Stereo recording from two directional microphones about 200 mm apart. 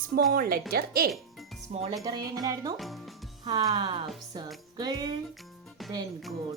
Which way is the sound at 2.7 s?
Centre (ahead or behind).